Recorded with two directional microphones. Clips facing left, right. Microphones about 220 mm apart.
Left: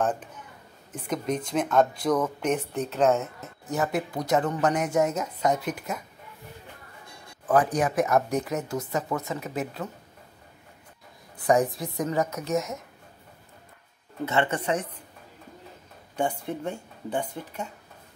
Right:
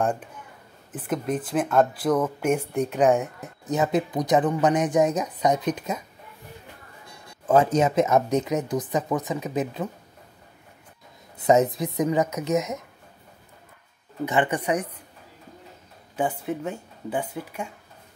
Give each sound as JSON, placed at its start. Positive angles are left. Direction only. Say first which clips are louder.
{"t": 0.9, "sound": "speech", "louder": "right 2 dB", "side_deg": -5}
{"t": 7.4, "sound": "speech", "louder": "right 4 dB", "side_deg": -25}
{"t": 11.3, "sound": "speech", "louder": "right 3 dB", "side_deg": -20}
{"t": 14.2, "sound": "speech", "louder": "right 2 dB", "side_deg": -15}
{"t": 16.2, "sound": "speech", "louder": "right 2 dB", "side_deg": -5}